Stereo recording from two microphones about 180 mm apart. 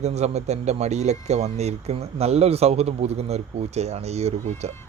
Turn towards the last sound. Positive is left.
turn(degrees=-35)  # may be behind; listen again after turning